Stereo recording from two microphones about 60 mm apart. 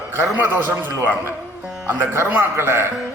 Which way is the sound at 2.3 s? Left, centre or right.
Right.